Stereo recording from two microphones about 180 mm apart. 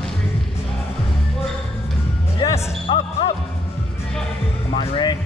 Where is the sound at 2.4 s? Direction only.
20° left (ahead or behind).